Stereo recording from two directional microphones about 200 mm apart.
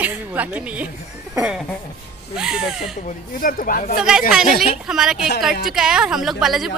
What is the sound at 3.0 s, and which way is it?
Speech, 45° left (ahead or behind).